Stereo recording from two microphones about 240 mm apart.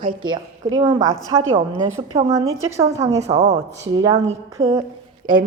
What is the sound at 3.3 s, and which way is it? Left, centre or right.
Speech, right.